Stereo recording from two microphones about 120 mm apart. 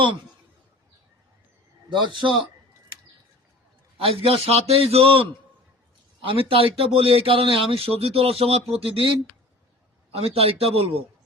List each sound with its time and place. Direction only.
1.9 s a man's voice: 40° right (ahead or behind)
3.9 s speech: 50° right (ahead or behind)
6.2 s speech: 50° right (ahead or behind)
10.2 s a man's voice: 55° right (ahead or behind)